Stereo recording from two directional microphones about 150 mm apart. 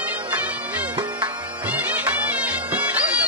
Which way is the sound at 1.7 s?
10° right (ahead or behind).